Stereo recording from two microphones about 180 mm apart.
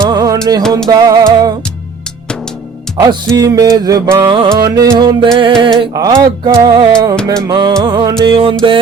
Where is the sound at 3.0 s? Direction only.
20° right (ahead or behind).